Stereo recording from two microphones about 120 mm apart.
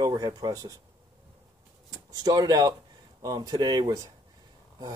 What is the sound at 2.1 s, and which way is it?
Speech, 35° right (ahead or behind).